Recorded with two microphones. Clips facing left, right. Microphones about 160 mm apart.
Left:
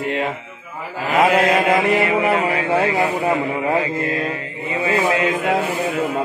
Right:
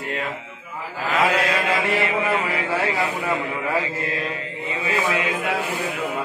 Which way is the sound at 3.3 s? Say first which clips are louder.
Left 5 dB; 35° left (ahead or behind).